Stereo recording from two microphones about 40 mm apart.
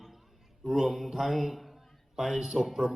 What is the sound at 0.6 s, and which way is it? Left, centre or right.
A man's voice, centre.